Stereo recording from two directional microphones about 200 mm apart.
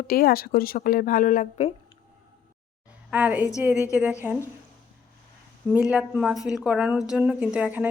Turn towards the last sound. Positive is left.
turn(degrees=-5)  # may be behind; listen again after turning